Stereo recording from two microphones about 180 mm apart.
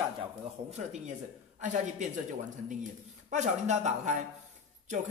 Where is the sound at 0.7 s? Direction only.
40° right (ahead or behind).